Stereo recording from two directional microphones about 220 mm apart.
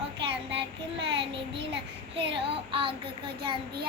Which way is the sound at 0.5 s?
50° right (ahead or behind).